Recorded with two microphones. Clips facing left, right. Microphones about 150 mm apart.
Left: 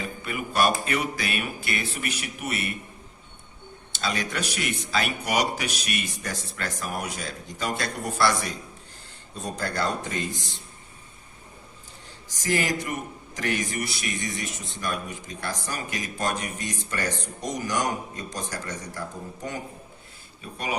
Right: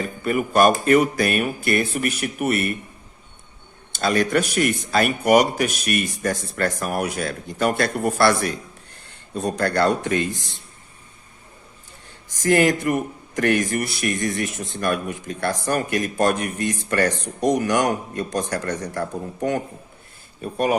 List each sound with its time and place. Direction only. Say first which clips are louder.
0.0 s speech: right 9 dB; 45° right (ahead or behind)
3.9 s speech: right 10 dB; 50° right (ahead or behind)
12.4 s speech: right 9 dB; 60° right (ahead or behind)
20.4 s speech: right 11 dB; 50° right (ahead or behind)